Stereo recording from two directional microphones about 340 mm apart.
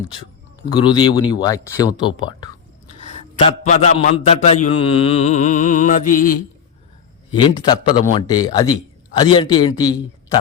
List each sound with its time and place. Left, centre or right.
0.7 s a man's voice: centre
3.1 s a man's voice: centre